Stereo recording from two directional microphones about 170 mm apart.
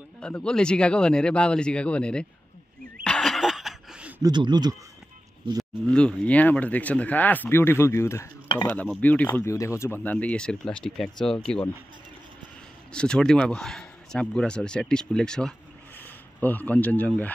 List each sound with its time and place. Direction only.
0.2 s a man's voice: 5° left (ahead or behind)
3.0 s snicker: 5° left (ahead or behind)
4.2 s speech: 25° right (ahead or behind)
5.6 s a man's voice: 5° left (ahead or behind)
12.9 s a man's voice: 5° left (ahead or behind)